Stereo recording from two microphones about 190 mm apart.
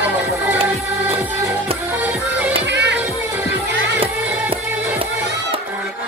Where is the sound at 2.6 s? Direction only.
65° right (ahead or behind).